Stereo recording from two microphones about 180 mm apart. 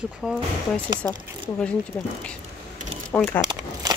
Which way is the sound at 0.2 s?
5° right (ahead or behind).